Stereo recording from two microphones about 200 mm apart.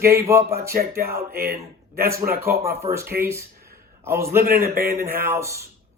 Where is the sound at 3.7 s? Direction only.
50° right (ahead or behind).